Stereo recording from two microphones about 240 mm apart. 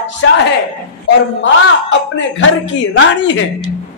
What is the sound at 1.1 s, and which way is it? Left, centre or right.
A man's voice, left.